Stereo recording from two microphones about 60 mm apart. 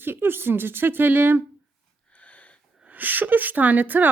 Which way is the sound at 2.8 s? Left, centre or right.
Right.